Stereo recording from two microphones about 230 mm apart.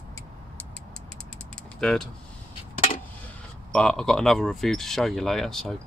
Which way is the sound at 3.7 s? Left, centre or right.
Centre.